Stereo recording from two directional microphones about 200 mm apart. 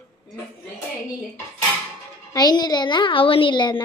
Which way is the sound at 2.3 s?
20° left (ahead or behind).